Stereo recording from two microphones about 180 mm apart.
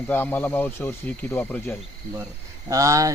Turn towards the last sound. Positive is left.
turn(degrees=-20)  # may be behind; listen again after turning